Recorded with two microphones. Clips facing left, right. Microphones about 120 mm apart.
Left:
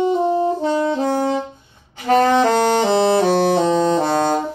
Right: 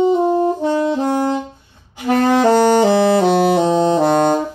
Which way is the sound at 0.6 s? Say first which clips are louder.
Right 2 dB; 15° right (ahead or behind).